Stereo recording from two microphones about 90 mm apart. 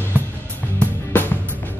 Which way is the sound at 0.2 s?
20° right (ahead or behind).